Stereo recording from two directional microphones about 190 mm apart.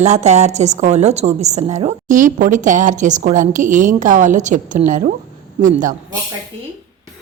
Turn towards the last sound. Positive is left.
turn(degrees=-45)  # may be behind; listen again after turning